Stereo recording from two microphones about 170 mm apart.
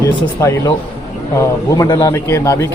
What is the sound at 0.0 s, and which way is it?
A man's voice, 20° left (ahead or behind).